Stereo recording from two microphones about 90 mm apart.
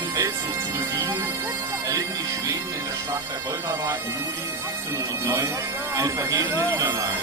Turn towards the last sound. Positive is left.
turn(degrees=-45)  # may be behind; listen again after turning